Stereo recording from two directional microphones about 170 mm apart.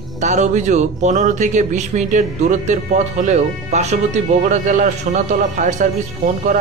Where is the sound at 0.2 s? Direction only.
45° right (ahead or behind).